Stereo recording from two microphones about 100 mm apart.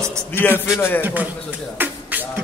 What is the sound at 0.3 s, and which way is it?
Speech, 20° left (ahead or behind).